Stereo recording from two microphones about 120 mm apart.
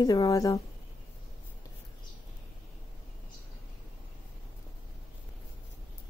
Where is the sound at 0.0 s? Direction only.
30° left (ahead or behind).